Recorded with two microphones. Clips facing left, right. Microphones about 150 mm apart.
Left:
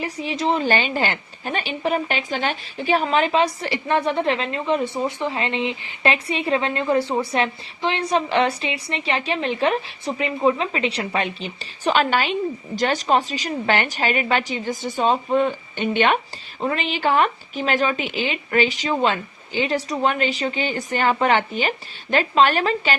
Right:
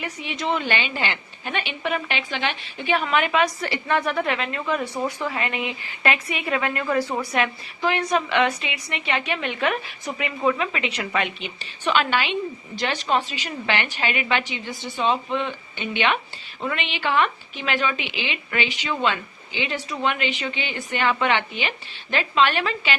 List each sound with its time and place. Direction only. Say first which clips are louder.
0.0 s a woman's voice: left 5 dB; 35° left (ahead or behind)